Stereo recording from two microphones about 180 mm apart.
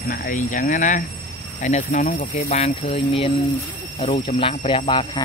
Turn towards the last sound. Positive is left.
turn(degrees=30)  # may be behind; listen again after turning